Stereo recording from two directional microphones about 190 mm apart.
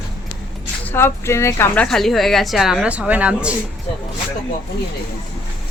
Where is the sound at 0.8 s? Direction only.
10° left (ahead or behind); by 3.5 s 5° right (ahead or behind).